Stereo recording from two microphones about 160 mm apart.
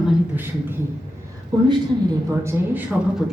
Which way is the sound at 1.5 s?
25° right (ahead or behind).